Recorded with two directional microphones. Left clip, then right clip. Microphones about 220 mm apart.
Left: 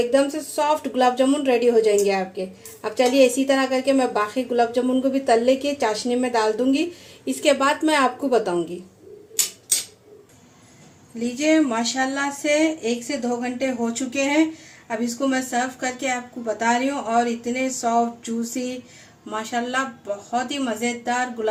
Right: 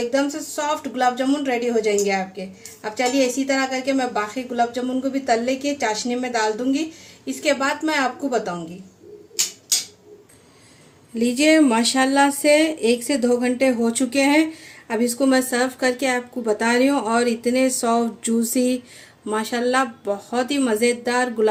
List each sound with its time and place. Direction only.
0.1 s a woman's voice: 5° left (ahead or behind)
11.2 s speech: 45° right (ahead or behind)